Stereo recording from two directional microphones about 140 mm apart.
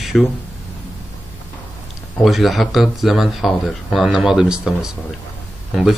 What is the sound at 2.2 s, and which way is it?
Speech, centre (ahead or behind).